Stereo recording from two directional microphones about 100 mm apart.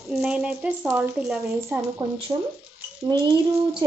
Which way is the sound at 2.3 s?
40° right (ahead or behind).